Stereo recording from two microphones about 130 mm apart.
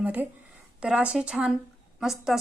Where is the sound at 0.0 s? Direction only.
10° right (ahead or behind).